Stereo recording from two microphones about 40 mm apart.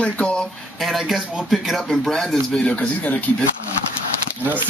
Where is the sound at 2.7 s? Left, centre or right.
Left.